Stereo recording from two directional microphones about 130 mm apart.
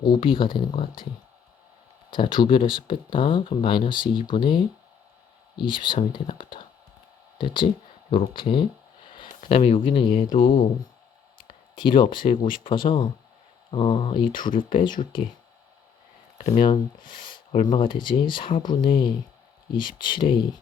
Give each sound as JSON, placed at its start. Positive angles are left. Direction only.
{"t": 0.0, "sound": "speech", "side_deg": 40}
{"t": 2.1, "sound": "speech", "side_deg": 40}
{"t": 11.3, "sound": "a sound", "side_deg": 90}
{"t": 11.8, "sound": "speech", "side_deg": 40}
{"t": 14.4, "sound": "speech", "side_deg": 90}
{"t": 16.6, "sound": "speech", "side_deg": 40}
{"t": 17.3, "sound": "a sound", "side_deg": 70}
{"t": 17.7, "sound": "speech", "side_deg": 40}